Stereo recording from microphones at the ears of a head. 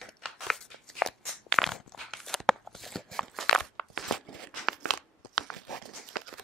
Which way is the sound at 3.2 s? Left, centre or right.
Right.